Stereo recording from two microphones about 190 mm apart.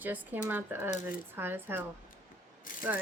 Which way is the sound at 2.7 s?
45° left (ahead or behind).